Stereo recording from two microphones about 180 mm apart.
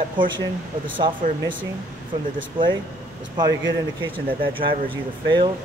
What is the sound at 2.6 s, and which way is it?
Speech, 25° right (ahead or behind).